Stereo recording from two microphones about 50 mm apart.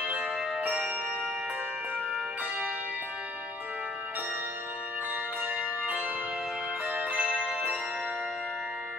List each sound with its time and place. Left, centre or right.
6.9 s music: right